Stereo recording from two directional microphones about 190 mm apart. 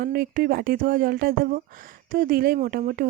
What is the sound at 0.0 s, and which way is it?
Speech, 50° right (ahead or behind).